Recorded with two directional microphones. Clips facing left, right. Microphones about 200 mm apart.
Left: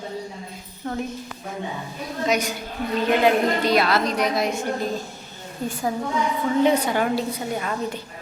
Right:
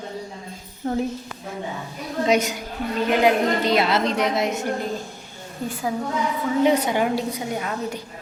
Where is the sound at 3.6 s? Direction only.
20° right (ahead or behind).